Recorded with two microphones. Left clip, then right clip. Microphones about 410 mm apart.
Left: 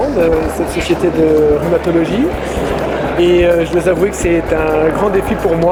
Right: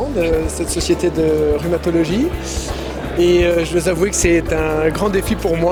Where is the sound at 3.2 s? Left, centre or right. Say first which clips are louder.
Left 3 dB; right.